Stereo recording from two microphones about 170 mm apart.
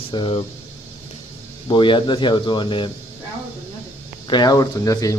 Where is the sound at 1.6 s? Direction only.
30° left (ahead or behind).